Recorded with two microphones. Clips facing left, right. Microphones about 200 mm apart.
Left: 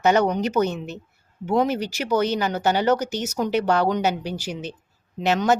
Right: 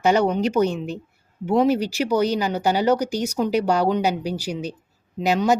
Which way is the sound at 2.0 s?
35° right (ahead or behind).